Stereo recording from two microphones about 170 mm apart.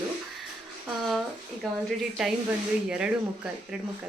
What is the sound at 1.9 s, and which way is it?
Speech, 5° right (ahead or behind).